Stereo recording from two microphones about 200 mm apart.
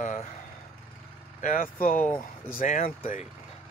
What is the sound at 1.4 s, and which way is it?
Speech, 45° left (ahead or behind).